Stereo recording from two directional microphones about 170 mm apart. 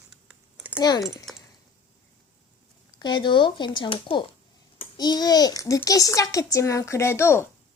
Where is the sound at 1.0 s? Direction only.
Centre (ahead or behind).